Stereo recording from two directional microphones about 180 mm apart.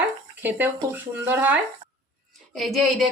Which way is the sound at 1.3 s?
10° right (ahead or behind).